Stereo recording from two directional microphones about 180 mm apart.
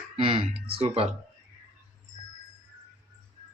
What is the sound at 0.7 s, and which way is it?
Speech, 30° right (ahead or behind).